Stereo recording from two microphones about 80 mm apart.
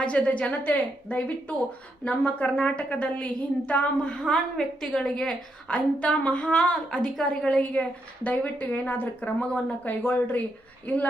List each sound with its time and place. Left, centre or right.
0.0 s a woman's voice: centre